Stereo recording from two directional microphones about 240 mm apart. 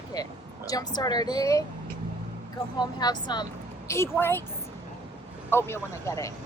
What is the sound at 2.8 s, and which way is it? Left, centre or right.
Speech, centre.